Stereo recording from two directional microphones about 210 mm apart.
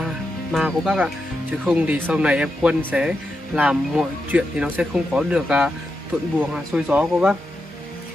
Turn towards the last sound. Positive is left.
turn(degrees=-5)  # may be behind; listen again after turning